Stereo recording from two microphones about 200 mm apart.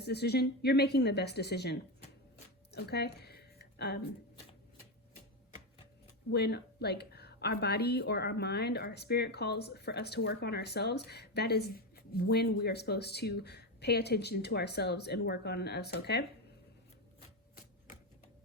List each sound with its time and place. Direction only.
0.0 s speech: 55° left (ahead or behind)
2.7 s a sound: 55° left (ahead or behind)
6.3 s speech: 55° left (ahead or behind)